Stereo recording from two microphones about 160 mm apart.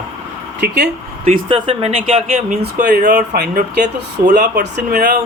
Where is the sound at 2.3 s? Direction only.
55° right (ahead or behind).